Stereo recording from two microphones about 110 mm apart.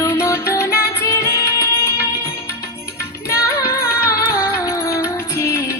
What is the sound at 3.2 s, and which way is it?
Music, 25° left (ahead or behind).